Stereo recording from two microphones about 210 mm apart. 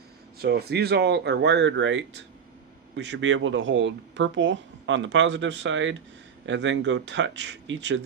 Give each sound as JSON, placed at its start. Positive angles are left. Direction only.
{"t": 0.3, "sound": "speech", "side_deg": -50}